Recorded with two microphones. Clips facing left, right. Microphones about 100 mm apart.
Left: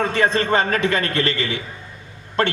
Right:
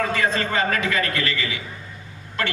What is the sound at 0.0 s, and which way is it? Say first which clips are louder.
A man's voice: left 3 dB; 30° left (ahead or behind).